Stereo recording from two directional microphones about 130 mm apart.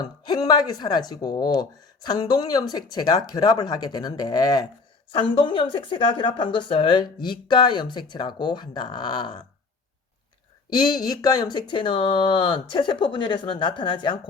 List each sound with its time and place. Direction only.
0.0 s speech: 30° left (ahead or behind)
5.1 s speech: 40° left (ahead or behind)
10.8 s speech: 30° left (ahead or behind)